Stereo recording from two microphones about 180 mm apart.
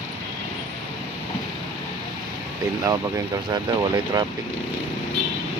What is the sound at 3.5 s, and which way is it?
Speech, 20° right (ahead or behind).